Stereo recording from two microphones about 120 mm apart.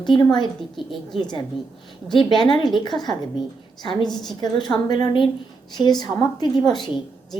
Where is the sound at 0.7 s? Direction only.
Centre (ahead or behind).